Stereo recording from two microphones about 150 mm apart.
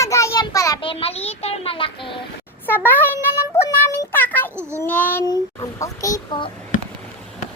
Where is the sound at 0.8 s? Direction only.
35° left (ahead or behind).